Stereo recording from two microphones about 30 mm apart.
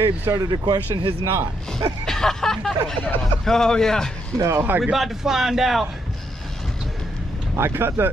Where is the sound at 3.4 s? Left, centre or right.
Centre.